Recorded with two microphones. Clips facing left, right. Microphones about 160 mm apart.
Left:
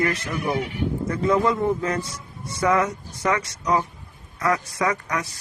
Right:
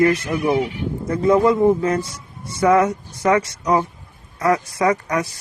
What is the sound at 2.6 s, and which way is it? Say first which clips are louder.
A woman's voice: right 6 dB; 30° right (ahead or behind).